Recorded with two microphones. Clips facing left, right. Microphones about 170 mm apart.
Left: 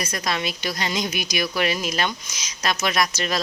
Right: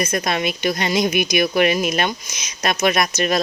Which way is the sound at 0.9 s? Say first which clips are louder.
Right 7 dB; 15° right (ahead or behind).